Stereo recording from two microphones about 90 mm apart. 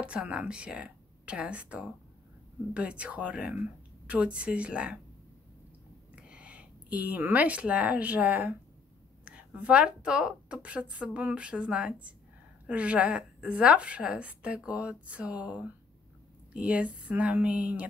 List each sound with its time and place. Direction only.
0.0 s a woman's voice: 15° right (ahead or behind)
6.1 s a woman's voice: 15° right (ahead or behind)